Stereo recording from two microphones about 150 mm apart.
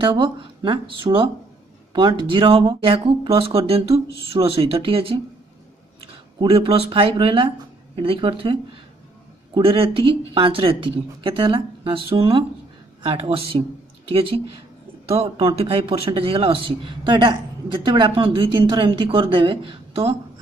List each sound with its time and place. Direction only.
0.0 s a man's voice: 35° right (ahead or behind)
6.5 s a man's voice: 35° right (ahead or behind)
15.0 s a man's voice: 35° right (ahead or behind)